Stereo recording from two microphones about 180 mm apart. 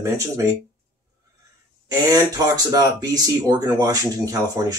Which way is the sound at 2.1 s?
20° right (ahead or behind).